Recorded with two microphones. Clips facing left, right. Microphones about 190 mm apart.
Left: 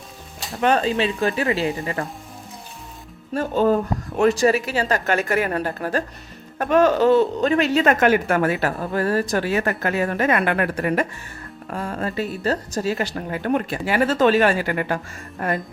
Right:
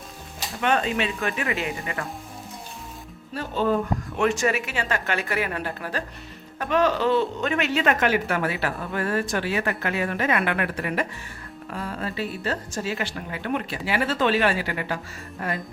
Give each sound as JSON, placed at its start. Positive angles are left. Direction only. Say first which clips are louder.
{"t": 0.6, "sound": "a woman's voice", "louder": "left 4 dB", "side_deg": 35}
{"t": 3.3, "sound": "a woman's voice", "louder": "left 5 dB", "side_deg": 45}